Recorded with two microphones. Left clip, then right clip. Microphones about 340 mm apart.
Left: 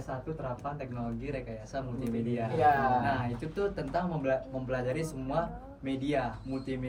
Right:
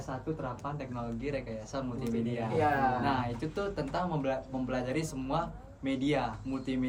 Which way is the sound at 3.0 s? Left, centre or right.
Centre.